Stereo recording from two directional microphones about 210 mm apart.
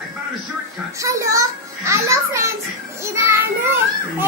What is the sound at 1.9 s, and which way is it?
Music, 15° right (ahead or behind).